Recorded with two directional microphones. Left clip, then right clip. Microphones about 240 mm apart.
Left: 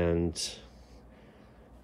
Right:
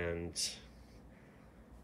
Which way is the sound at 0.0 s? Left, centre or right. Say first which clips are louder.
Left 9 dB; centre.